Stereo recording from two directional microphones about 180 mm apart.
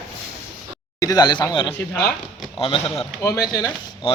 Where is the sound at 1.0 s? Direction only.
20° left (ahead or behind).